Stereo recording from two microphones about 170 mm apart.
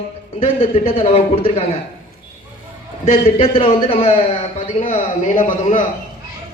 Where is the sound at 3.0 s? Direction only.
35° left (ahead or behind).